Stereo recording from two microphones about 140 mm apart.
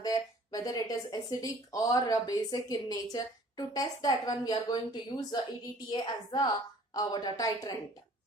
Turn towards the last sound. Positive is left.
turn(degrees=25)  # may be behind; listen again after turning